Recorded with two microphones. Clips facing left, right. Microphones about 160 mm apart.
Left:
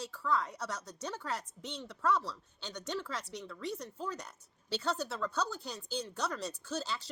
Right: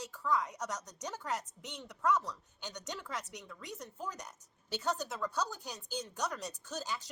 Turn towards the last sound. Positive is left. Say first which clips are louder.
# left 2 dB
turn(degrees=-15)  # may be behind; listen again after turning